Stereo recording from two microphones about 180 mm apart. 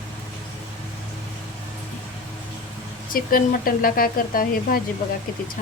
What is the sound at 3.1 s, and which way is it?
Speech, 50° left (ahead or behind).